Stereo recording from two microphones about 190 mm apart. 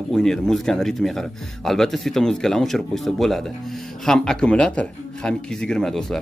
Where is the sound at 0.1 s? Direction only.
Centre (ahead or behind).